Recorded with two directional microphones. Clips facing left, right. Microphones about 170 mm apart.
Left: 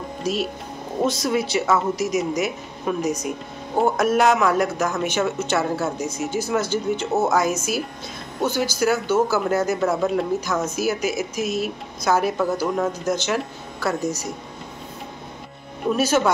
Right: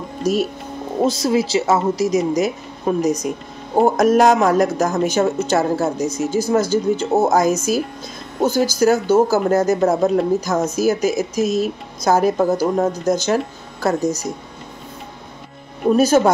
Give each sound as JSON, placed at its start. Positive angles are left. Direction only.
{"t": 0.2, "sound": "speech", "side_deg": -45}
{"t": 1.0, "sound": "speech", "side_deg": -30}
{"t": 15.9, "sound": "speech", "side_deg": -40}